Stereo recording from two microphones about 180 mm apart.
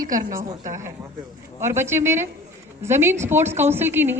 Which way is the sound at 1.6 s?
15° right (ahead or behind).